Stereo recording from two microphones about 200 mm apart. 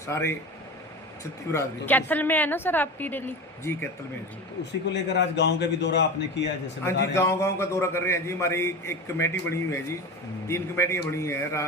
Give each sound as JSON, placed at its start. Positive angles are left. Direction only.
{"t": 0.0, "sound": "a woman's voice", "side_deg": 15}
{"t": 1.5, "sound": "a woman's voice", "side_deg": 10}
{"t": 4.9, "sound": "a man's voice", "side_deg": 60}
{"t": 7.1, "sound": "a woman's voice", "side_deg": 15}